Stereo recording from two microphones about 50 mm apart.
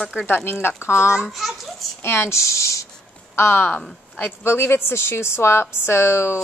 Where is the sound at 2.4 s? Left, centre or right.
Left.